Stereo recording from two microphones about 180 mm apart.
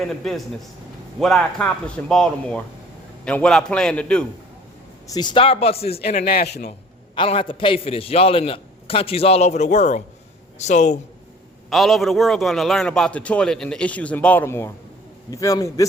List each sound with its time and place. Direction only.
0.0 s a man's voice: centre (ahead or behind)
5.0 s a man's voice: 20° left (ahead or behind)
6.2 s a man's voice: 60° left (ahead or behind)
7.2 s a man's voice: 30° left (ahead or behind)
11.7 s a man's voice: centre (ahead or behind); by 15.9 s 20° left (ahead or behind)